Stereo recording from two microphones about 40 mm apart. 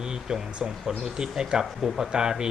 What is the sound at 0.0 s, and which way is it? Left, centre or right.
Speech, centre.